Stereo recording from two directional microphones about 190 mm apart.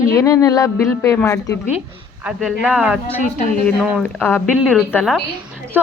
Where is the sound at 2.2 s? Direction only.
5° right (ahead or behind).